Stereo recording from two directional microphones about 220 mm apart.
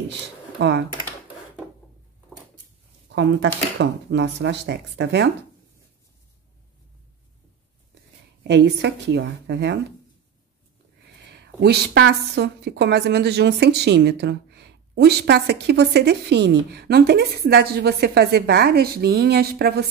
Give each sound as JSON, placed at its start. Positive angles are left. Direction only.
{"t": 0.6, "sound": "a woman's voice", "side_deg": -50}
{"t": 3.1, "sound": "a woman's voice", "side_deg": -55}
{"t": 8.5, "sound": "a woman's voice", "side_deg": -50}
{"t": 11.1, "sound": "a woman's voice", "side_deg": -50}